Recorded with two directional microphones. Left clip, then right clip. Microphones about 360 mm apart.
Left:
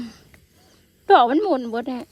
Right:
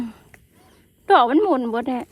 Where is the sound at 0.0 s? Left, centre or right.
Centre.